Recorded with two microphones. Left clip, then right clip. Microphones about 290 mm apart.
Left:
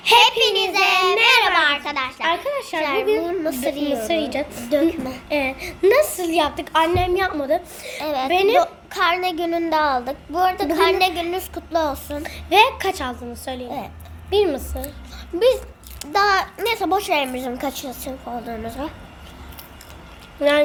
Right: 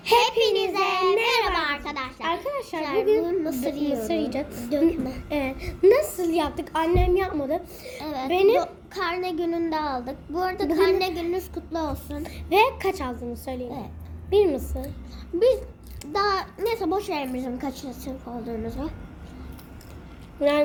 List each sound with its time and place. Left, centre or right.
0.0 s child singing: left
1.1 s a child's voice: left
20.4 s a child's voice: left